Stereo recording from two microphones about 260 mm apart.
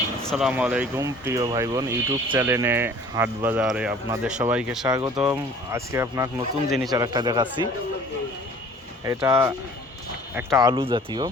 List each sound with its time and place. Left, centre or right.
0.2 s speech: centre
4.9 s speech: centre
6.7 s speech: centre
6.9 s speech: centre
9.0 s speech: centre